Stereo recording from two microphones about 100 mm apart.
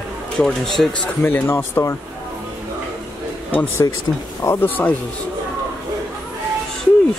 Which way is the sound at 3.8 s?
35° left (ahead or behind).